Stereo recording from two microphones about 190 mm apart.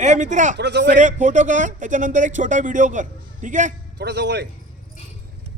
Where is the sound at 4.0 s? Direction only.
65° right (ahead or behind).